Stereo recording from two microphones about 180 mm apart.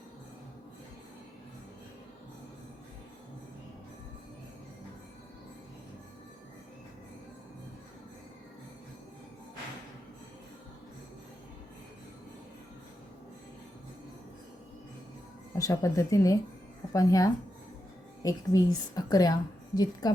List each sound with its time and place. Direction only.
15.5 s a woman's voice: 20° left (ahead or behind)